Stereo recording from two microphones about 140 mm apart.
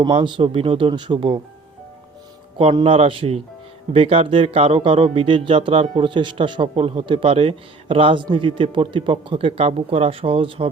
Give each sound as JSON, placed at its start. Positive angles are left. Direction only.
{"t": 0.0, "sound": "a man's voice", "side_deg": -35}
{"t": 2.8, "sound": "a man's voice", "side_deg": -40}